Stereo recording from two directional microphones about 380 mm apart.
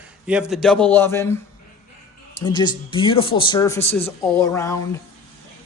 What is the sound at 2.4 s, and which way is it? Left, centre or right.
Speech, centre.